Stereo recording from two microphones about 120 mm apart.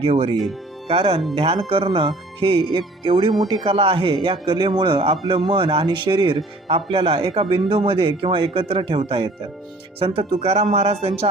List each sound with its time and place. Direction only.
0.0 s speech: 55° right (ahead or behind)